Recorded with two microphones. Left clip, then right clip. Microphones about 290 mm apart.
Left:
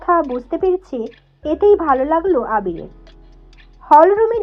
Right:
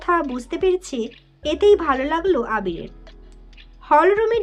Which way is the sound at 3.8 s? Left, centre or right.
Centre.